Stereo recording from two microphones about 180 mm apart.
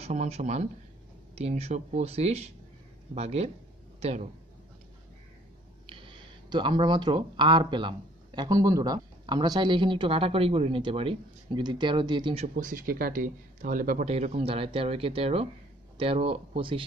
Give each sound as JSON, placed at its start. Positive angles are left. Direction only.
{"t": 0.0, "sound": "a man's voice", "side_deg": -40}
{"t": 6.5, "sound": "speech", "side_deg": -25}
{"t": 12.5, "sound": "speech", "side_deg": -50}